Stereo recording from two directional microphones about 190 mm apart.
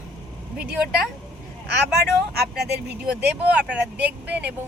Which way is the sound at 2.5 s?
60° right (ahead or behind).